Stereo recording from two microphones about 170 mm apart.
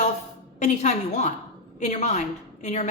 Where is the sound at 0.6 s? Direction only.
40° left (ahead or behind).